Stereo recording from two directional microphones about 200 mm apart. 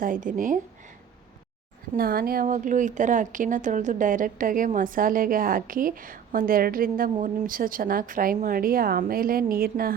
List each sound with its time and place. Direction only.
0.0 s a woman's voice: 40° right (ahead or behind)
2.0 s a woman's voice: 50° right (ahead or behind)